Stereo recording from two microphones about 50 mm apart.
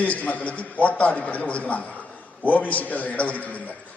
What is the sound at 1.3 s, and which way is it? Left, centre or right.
A man's voice, left.